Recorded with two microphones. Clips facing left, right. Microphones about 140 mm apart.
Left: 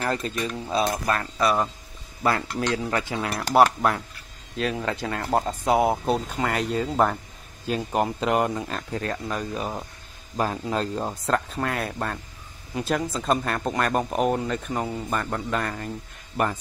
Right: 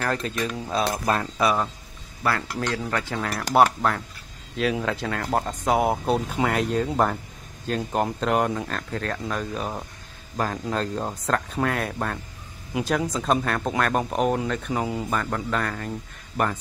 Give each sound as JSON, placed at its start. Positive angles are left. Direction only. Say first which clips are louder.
{"t": 0.1, "sound": "speech", "louder": "right 1 dB", "side_deg": 5}
{"t": 2.2, "sound": "cutlery", "louder": "left 2 dB", "side_deg": 20}
{"t": 2.8, "sound": "speech", "louder": "left 1 dB", "side_deg": 10}
{"t": 4.6, "sound": "speech", "louder": "right 2 dB", "side_deg": 0}